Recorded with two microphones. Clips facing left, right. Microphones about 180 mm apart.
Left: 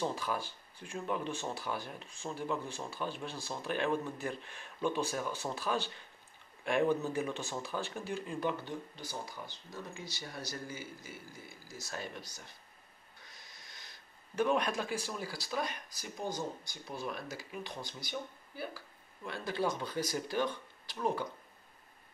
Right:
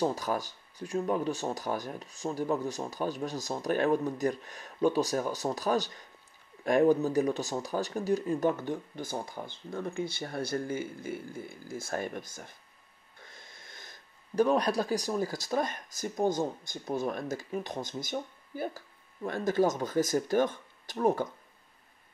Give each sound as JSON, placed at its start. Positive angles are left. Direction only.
{"t": 0.0, "sound": "speech", "side_deg": -40}